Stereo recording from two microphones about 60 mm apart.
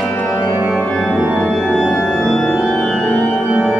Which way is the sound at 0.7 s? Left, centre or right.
Centre.